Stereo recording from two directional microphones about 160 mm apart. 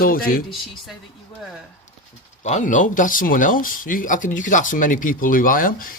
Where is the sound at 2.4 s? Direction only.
45° left (ahead or behind).